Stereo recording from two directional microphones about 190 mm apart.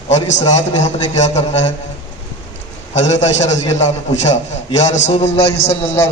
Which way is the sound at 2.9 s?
35° left (ahead or behind).